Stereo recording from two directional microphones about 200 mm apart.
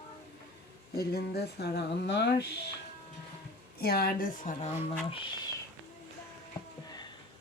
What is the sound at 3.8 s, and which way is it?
Speech, 50° left (ahead or behind).